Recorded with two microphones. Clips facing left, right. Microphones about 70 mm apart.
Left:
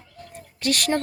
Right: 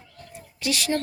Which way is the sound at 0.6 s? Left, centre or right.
Left.